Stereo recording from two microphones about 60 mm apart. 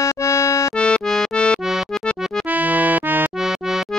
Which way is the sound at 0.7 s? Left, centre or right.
Centre.